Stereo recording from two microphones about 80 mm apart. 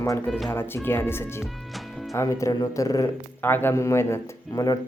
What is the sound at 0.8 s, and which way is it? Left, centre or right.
Speech, left.